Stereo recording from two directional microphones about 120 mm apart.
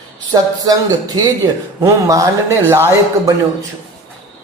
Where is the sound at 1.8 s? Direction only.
25° right (ahead or behind).